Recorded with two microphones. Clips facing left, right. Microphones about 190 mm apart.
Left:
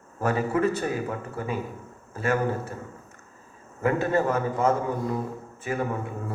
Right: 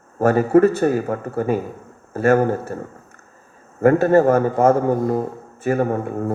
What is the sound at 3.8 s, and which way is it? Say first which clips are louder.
A man's voice: right 10 dB; 50° right (ahead or behind).